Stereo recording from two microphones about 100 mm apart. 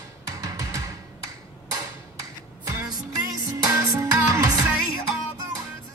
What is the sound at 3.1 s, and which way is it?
Music, 35° right (ahead or behind).